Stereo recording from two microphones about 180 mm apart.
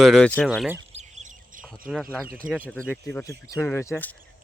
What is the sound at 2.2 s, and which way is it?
Speech, 55° right (ahead or behind).